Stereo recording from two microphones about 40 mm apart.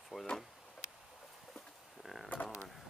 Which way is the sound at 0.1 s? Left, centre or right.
Centre.